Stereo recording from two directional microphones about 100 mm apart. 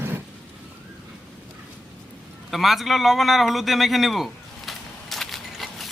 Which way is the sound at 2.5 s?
Centre (ahead or behind).